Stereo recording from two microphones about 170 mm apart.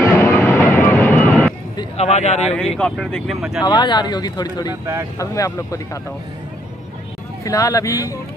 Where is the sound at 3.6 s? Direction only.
25° left (ahead or behind).